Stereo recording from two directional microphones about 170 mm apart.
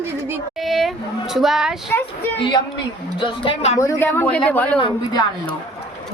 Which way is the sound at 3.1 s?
30° left (ahead or behind).